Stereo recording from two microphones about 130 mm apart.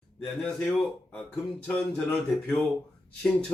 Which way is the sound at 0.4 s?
5° left (ahead or behind).